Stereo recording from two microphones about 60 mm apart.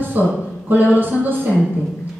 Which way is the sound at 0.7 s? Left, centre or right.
Right.